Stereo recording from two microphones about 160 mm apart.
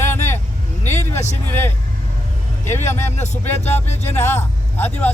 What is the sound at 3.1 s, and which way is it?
Music, 45° left (ahead or behind).